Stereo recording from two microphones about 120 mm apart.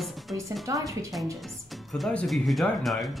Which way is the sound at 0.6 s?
25° right (ahead or behind).